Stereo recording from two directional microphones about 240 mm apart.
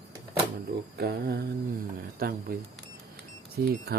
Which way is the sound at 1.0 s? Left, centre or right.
Right.